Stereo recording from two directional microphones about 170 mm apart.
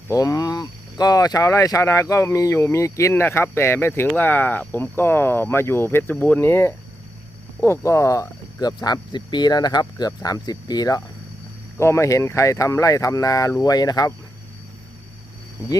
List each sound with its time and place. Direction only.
0.1 s speech: 20° left (ahead or behind)